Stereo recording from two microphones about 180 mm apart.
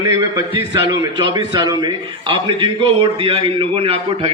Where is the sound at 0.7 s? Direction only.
25° right (ahead or behind).